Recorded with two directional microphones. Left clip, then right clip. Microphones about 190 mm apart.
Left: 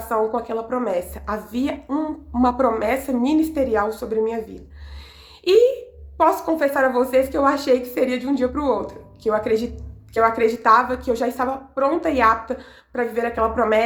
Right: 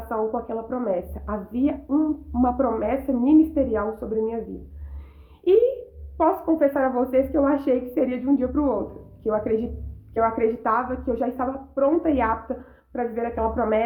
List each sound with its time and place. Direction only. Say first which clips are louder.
0.1 s a woman's voice: left 4 dB; 20° left (ahead or behind)
6.1 s a woman's voice: left 3 dB; 20° left (ahead or behind)